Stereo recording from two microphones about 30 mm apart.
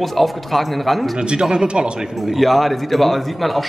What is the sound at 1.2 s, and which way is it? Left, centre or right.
Speech, right.